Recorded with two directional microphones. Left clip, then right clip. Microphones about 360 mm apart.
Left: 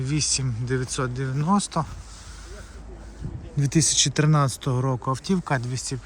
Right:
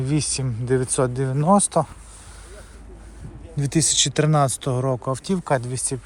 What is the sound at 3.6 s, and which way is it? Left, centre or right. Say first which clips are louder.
Speech: right 1 dB; centre.